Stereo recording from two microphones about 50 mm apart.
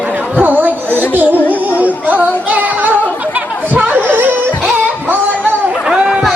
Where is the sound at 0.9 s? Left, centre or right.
Left.